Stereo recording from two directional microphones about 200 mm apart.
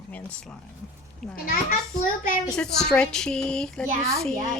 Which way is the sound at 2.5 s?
5° left (ahead or behind).